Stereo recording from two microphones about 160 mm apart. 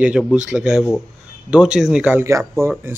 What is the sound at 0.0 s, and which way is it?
A man's voice, 5° right (ahead or behind).